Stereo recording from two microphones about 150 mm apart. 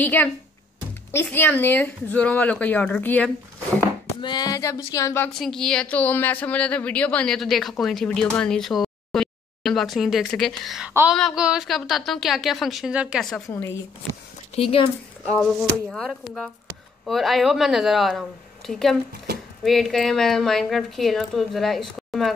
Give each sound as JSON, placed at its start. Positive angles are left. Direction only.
{"t": 0.0, "sound": "speech", "side_deg": 10}
{"t": 4.2, "sound": "a sound", "side_deg": 30}
{"t": 5.4, "sound": "speech", "side_deg": 5}
{"t": 14.5, "sound": "speech", "side_deg": 40}
{"t": 15.3, "sound": "speech", "side_deg": 5}